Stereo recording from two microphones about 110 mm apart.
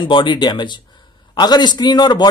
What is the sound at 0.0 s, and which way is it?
A man's voice, 50° left (ahead or behind).